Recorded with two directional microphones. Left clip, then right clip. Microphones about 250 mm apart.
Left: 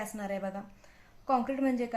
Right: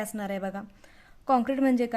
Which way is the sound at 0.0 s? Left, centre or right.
Right.